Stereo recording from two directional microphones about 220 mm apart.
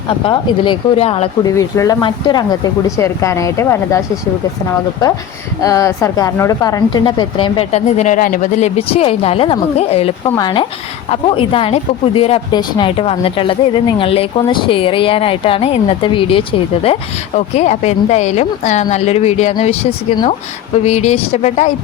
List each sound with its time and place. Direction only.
0.3 s speech: 20° left (ahead or behind)
1.5 s speech: 15° left (ahead or behind)
5.6 s speech: 15° left (ahead or behind)
10.2 s speech: 15° left (ahead or behind)